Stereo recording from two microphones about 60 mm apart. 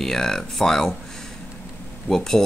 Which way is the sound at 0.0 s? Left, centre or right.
Centre.